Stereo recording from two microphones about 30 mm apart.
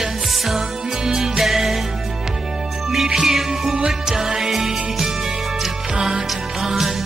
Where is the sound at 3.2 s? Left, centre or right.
Centre.